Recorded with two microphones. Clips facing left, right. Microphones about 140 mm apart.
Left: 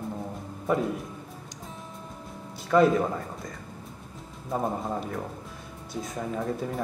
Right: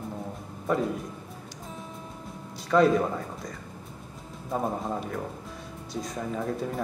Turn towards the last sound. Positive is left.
turn(degrees=0)  # may be behind; listen again after turning